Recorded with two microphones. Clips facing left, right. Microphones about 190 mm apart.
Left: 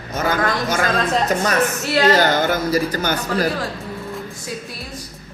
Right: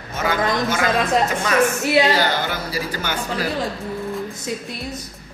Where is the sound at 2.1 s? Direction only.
45° left (ahead or behind).